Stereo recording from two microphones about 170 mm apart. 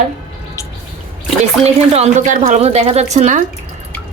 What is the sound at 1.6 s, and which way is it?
A woman's voice, 40° right (ahead or behind).